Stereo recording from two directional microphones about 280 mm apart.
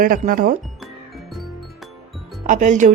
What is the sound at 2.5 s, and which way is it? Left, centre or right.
Speech, right.